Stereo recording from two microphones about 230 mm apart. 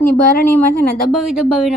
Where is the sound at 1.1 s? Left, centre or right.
Centre.